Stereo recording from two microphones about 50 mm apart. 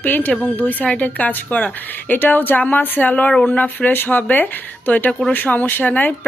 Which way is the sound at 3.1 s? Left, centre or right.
Left.